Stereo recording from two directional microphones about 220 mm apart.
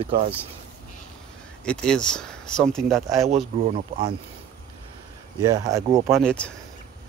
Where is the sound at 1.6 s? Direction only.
5° left (ahead or behind).